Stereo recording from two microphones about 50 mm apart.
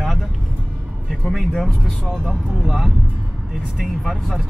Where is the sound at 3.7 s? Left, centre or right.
Centre.